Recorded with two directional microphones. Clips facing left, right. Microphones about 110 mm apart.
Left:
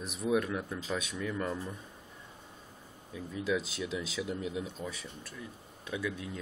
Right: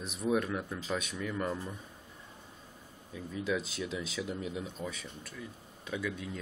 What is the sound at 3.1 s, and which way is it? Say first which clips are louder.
Speech: left 1 dB; 5° left (ahead or behind).